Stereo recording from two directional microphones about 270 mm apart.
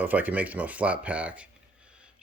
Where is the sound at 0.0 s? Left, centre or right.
Centre.